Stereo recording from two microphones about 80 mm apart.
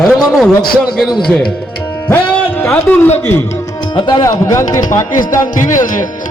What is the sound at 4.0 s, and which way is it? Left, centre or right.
Speech, left.